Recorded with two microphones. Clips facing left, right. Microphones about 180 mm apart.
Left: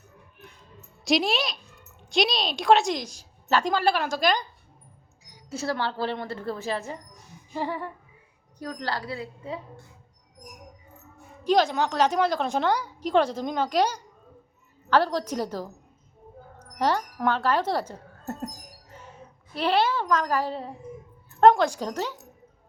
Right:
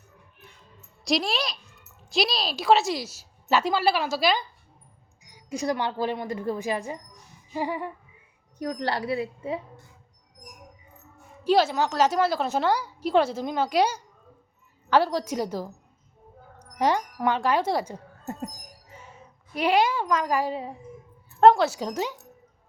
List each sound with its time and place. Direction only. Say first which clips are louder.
1.0 s a woman's voice: left 2 dB; centre (ahead or behind)
8.5 s a woman's voice: right 4 dB; 20° right (ahead or behind)
11.4 s a woman's voice: right 1 dB; 5° right (ahead or behind)
16.6 s music: right 1 dB; 15° right (ahead or behind)
19.5 s speech: right 1 dB; 10° right (ahead or behind)